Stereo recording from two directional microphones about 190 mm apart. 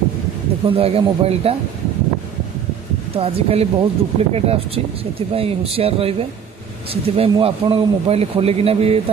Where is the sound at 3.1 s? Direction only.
30° right (ahead or behind).